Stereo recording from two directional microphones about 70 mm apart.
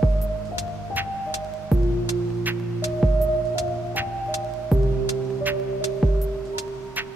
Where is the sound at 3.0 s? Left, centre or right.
Centre.